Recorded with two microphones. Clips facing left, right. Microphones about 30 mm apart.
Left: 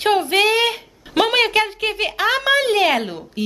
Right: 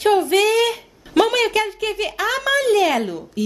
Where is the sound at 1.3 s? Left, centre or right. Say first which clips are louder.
Left 2 dB; left.